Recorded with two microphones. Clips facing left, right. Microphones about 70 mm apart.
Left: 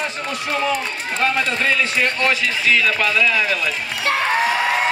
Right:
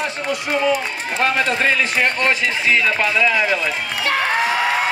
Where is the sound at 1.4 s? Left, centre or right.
Right.